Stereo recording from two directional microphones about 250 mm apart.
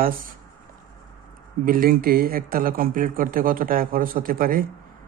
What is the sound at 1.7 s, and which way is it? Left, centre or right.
Speech, right.